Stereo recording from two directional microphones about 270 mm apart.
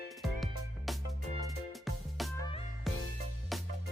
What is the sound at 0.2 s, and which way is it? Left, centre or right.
Music, centre.